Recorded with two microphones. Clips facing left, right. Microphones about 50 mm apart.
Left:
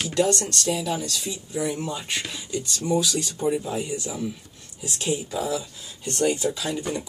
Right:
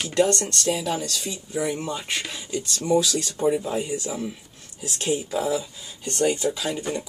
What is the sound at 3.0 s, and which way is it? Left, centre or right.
Speech, centre.